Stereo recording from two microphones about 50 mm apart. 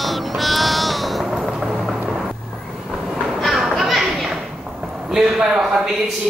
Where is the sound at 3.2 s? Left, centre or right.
Centre.